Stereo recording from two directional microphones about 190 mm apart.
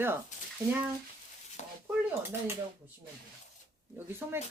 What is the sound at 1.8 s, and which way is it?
Speech, 10° right (ahead or behind).